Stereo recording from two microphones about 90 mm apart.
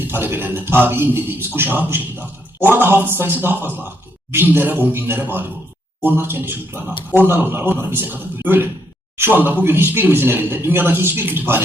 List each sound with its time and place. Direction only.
0.1 s a man's voice: 25° right (ahead or behind)